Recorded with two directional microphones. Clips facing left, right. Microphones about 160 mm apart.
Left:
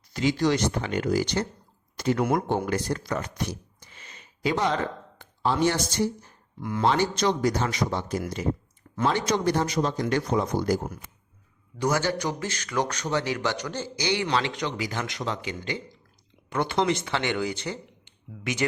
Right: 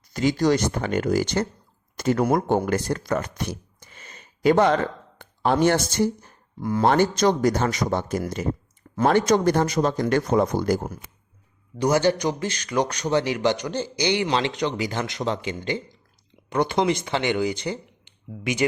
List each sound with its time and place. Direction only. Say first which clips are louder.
0.1 s speech: right 3 dB; 45° right (ahead or behind)
6.6 s speech: right 6 dB; 35° right (ahead or behind)
6.8 s speech: right 4 dB; 50° right (ahead or behind)
11.8 s a man's voice: right 5 dB; 20° right (ahead or behind)